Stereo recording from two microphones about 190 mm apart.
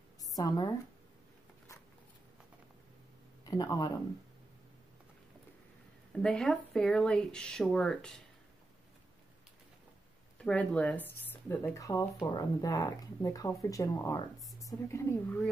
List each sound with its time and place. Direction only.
3.4 s speech: 20° left (ahead or behind)
6.1 s speech: 5° left (ahead or behind)
10.4 s speech: 5° left (ahead or behind)